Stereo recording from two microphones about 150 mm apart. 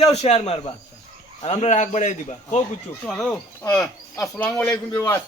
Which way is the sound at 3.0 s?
5° left (ahead or behind).